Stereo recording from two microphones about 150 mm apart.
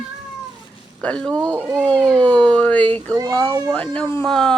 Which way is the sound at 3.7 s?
10° left (ahead or behind).